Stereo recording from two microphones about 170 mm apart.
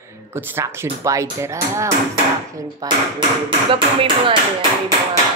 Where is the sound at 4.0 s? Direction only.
30° right (ahead or behind).